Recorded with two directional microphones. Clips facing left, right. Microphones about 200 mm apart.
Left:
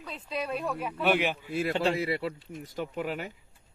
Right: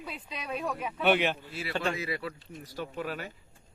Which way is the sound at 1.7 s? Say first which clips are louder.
Left 1 dB; 30° left (ahead or behind).